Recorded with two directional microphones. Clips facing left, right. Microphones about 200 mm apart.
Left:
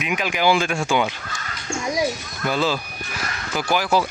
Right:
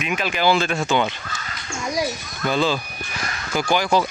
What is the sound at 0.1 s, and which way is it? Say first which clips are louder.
Speech: even; 10° left (ahead or behind).